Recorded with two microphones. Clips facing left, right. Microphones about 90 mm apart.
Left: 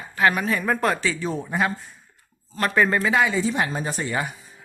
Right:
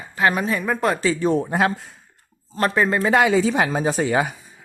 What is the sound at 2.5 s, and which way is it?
Speech, 30° right (ahead or behind).